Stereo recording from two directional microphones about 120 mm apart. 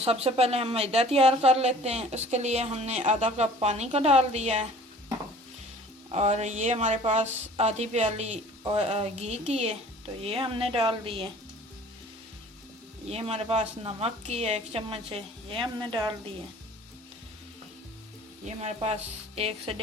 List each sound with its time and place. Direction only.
0.0 s a woman's voice: 55° right (ahead or behind)
6.1 s a woman's voice: 65° right (ahead or behind)
10.2 s a woman's voice: 50° right (ahead or behind)
13.1 s a woman's voice: 60° right (ahead or behind); by 16.1 s 40° right (ahead or behind)
18.4 s a woman's voice: 65° right (ahead or behind)